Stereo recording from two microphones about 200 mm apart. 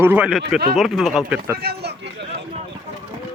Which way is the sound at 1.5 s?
50° right (ahead or behind).